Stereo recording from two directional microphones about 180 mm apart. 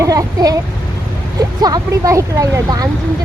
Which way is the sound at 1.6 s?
20° right (ahead or behind).